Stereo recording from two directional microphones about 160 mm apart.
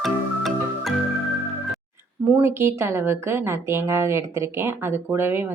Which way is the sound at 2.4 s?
15° right (ahead or behind).